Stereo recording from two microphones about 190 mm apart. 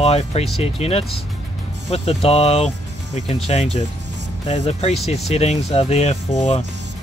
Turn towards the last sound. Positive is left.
turn(degrees=35)  # may be behind; listen again after turning